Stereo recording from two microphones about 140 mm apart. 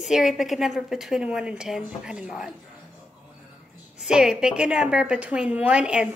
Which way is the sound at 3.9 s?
5° right (ahead or behind).